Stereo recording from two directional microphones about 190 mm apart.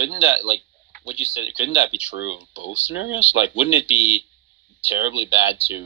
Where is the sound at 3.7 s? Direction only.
30° left (ahead or behind).